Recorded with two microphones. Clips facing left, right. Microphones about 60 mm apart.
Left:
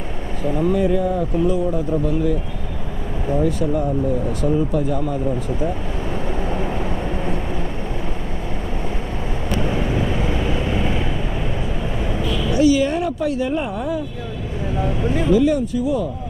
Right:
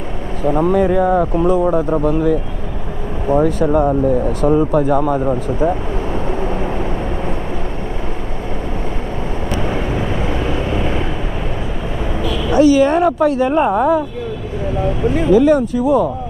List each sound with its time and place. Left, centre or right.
0.5 s speech: right
9.6 s vehicle: right
10.8 s vehicle: right
12.5 s speech: right
15.3 s speech: right